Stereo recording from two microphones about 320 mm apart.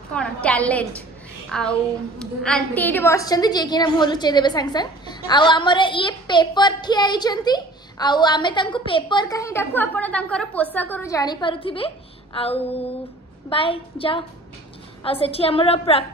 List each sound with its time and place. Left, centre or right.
0.1 s a woman's voice: centre